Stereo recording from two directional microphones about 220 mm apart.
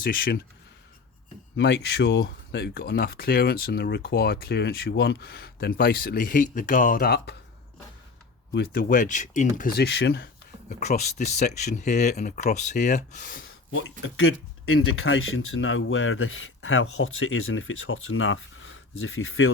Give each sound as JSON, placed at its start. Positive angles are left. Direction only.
{"t": 0.0, "sound": "speech", "side_deg": 40}
{"t": 1.5, "sound": "speech", "side_deg": 50}
{"t": 8.5, "sound": "speech", "side_deg": 40}
{"t": 10.7, "sound": "speech", "side_deg": 35}
{"t": 14.0, "sound": "speech", "side_deg": 65}